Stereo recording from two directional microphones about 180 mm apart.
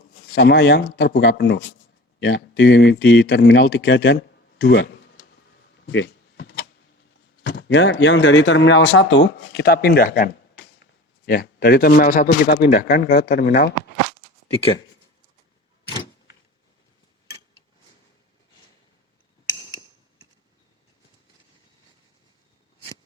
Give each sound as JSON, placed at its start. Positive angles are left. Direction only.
{"t": 0.3, "sound": "speech", "side_deg": 70}
{"t": 5.7, "sound": "a sound", "side_deg": 80}
{"t": 7.4, "sound": "speech", "side_deg": 70}
{"t": 11.3, "sound": "speech", "side_deg": 60}
{"t": 12.3, "sound": "speech", "side_deg": 65}
{"t": 14.5, "sound": "speech", "side_deg": 30}